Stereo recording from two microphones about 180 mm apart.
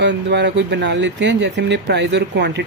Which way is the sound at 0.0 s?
70° right (ahead or behind).